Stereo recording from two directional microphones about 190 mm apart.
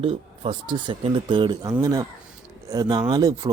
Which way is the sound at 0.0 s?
30° right (ahead or behind).